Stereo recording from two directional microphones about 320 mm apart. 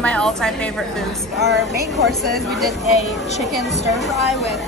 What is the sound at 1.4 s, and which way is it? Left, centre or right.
Speech, right.